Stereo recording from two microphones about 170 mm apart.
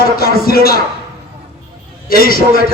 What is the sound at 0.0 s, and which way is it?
Music, 60° left (ahead or behind).